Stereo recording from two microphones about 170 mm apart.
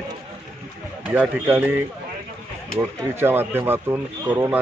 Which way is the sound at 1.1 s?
10° right (ahead or behind).